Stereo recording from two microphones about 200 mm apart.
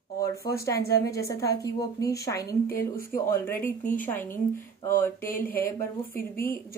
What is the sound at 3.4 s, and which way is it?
Speech, 10° left (ahead or behind).